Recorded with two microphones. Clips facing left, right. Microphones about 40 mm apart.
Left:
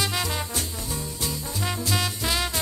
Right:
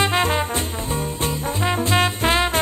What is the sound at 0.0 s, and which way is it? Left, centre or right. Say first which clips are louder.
Music: right 8 dB; right.